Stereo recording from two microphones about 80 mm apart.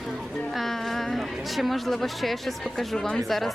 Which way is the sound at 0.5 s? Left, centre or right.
Centre.